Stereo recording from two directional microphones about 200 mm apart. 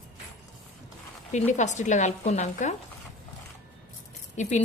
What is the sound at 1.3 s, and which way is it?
A woman's voice, 35° left (ahead or behind).